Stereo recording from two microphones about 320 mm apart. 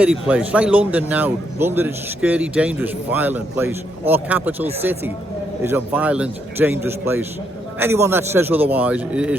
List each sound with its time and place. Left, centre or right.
0.0 s a man's voice: centre
5.6 s a man's voice: centre